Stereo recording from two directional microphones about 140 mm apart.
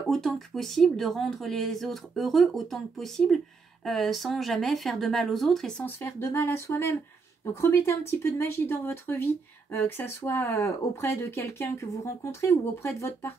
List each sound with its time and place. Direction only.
0.1 s speech: centre (ahead or behind)
5.9 s speech: 15° left (ahead or behind)